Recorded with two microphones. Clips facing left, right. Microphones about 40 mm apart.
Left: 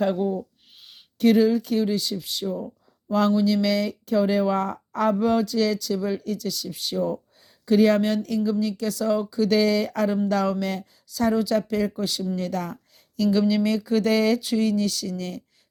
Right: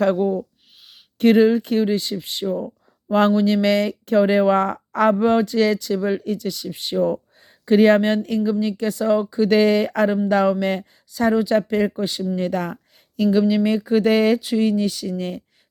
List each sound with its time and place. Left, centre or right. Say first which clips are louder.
0.0 s speech: right 5 dB; right
1.2 s speech: right 4 dB; right
5.1 s speech: right 4 dB; right
14.4 s speech: right 3 dB; centre